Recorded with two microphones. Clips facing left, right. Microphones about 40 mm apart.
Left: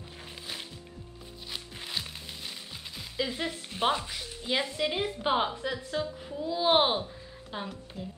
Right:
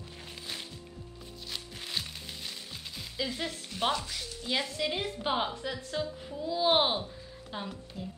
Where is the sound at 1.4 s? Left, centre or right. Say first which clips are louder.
Left 1 dB; centre.